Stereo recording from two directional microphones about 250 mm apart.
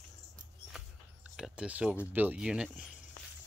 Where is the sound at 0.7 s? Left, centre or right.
Centre.